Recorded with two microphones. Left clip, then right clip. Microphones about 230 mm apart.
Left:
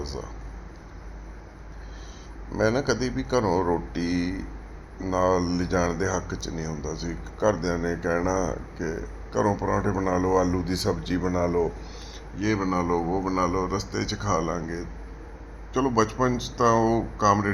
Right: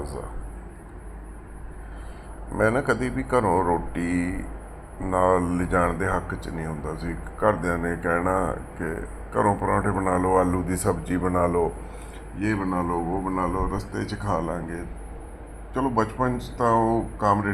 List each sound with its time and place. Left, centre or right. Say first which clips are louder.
2.6 s a man's voice: right 2 dB; centre